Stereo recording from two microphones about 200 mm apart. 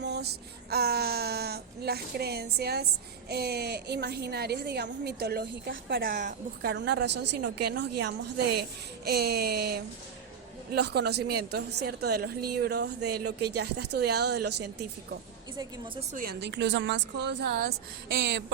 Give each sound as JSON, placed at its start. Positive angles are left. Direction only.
{"t": 0.0, "sound": "child singing", "side_deg": -55}
{"t": 0.7, "sound": "a sound", "side_deg": -50}
{"t": 2.6, "sound": "a woman's voice", "side_deg": -55}
{"t": 15.5, "sound": "a woman's voice", "side_deg": -20}
{"t": 16.1, "sound": "a woman's voice", "side_deg": -50}